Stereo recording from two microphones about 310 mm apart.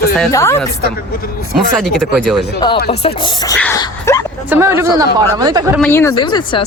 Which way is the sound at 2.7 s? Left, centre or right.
Left.